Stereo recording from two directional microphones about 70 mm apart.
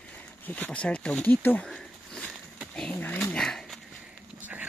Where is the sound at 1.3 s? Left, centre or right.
Left.